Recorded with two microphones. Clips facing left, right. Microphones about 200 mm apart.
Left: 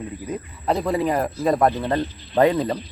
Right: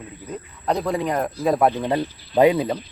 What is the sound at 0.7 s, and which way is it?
A man's voice, centre (ahead or behind).